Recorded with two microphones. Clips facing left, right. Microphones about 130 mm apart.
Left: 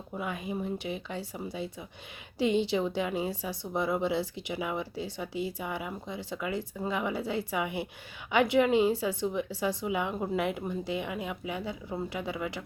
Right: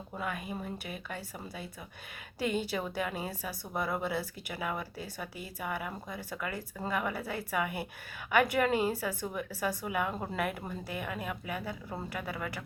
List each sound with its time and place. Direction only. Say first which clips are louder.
0.2 s speech: left 3 dB; 25° left (ahead or behind)
3.5 s speech: left 6 dB; 5° right (ahead or behind)
3.8 s speech: left 4 dB; 20° left (ahead or behind)